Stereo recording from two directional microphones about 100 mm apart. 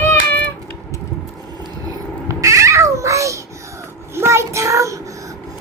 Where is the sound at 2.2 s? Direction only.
30° right (ahead or behind).